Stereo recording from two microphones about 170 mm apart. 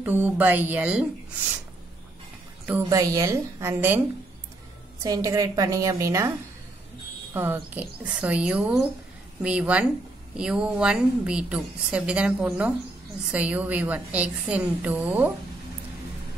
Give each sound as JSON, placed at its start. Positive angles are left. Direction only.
{"t": 0.0, "sound": "a woman's voice", "side_deg": -10}
{"t": 2.6, "sound": "a woman's voice", "side_deg": -15}
{"t": 5.0, "sound": "a woman's voice", "side_deg": -20}
{"t": 7.3, "sound": "a woman's voice", "side_deg": -10}